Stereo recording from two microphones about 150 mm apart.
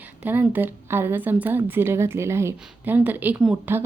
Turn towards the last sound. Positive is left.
turn(degrees=-10)  # may be behind; listen again after turning